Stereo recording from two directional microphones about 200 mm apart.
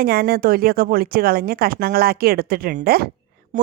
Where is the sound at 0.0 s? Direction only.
50° right (ahead or behind).